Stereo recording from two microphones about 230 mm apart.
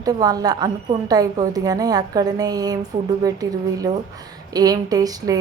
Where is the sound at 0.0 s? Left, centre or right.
Centre.